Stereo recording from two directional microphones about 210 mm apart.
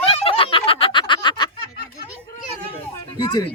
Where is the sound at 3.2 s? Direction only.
20° left (ahead or behind).